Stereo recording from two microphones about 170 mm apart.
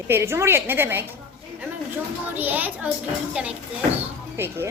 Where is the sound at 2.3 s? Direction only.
10° right (ahead or behind).